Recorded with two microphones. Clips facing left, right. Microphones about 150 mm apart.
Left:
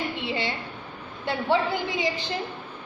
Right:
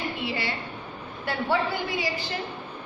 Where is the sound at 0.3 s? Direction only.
20° left (ahead or behind).